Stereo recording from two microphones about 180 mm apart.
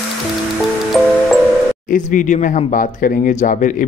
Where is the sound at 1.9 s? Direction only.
45° left (ahead or behind).